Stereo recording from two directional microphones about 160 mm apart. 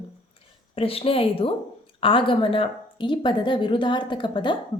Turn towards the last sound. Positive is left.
turn(degrees=30)  # may be behind; listen again after turning